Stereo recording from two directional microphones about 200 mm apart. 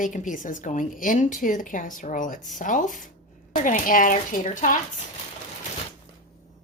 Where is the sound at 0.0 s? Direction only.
40° left (ahead or behind).